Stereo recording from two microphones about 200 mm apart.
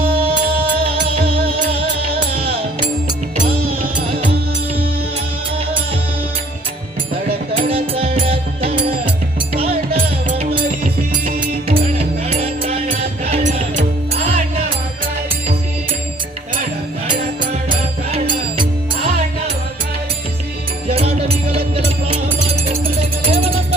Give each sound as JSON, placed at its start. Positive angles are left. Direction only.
{"t": 1.4, "sound": "music", "side_deg": -50}
{"t": 2.5, "sound": "music", "side_deg": -30}
{"t": 7.7, "sound": "music", "side_deg": -30}
{"t": 9.9, "sound": "music", "side_deg": -30}
{"t": 11.9, "sound": "music", "side_deg": -30}
{"t": 20.8, "sound": "music", "side_deg": -30}
{"t": 22.7, "sound": "music", "side_deg": -30}